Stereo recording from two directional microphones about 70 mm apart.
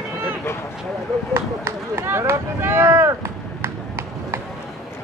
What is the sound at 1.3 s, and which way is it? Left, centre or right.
Speech, right.